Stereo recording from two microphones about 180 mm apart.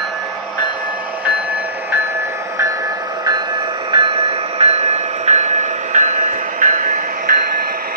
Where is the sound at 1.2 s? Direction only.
10° right (ahead or behind).